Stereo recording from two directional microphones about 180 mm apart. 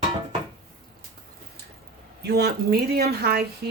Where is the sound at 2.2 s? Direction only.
60° right (ahead or behind).